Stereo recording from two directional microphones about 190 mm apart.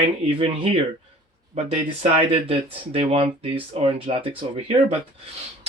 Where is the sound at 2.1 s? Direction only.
30° right (ahead or behind).